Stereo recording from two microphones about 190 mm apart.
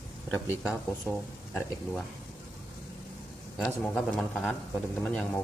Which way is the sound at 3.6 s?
5° left (ahead or behind).